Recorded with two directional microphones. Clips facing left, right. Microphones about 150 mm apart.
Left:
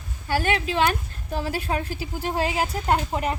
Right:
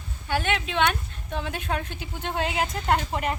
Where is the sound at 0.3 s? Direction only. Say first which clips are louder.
Left 3 dB; 40° left (ahead or behind).